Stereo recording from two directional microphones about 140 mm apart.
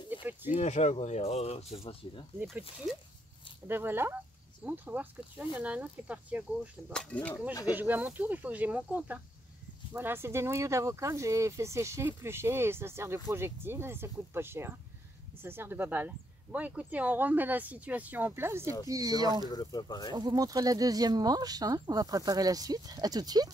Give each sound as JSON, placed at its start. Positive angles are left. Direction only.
{"t": 0.1, "sound": "a sound", "side_deg": -15}
{"t": 0.5, "sound": "speech", "side_deg": 55}
{"t": 3.6, "sound": "speech", "side_deg": -15}
{"t": 6.9, "sound": "speech", "side_deg": 5}
{"t": 7.7, "sound": "speech", "side_deg": -15}
{"t": 19.5, "sound": "speech", "side_deg": 30}
{"t": 20.2, "sound": "speech", "side_deg": -30}